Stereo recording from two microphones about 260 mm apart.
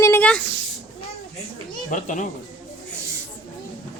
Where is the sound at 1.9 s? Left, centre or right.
Left.